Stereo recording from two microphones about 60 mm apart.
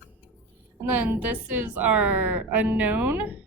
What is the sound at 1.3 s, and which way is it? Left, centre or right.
A woman's voice, right.